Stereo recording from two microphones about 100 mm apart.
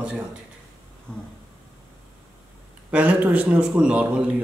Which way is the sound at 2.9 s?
15° right (ahead or behind).